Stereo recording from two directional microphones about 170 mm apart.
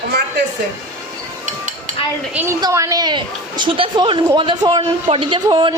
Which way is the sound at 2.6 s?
20° right (ahead or behind).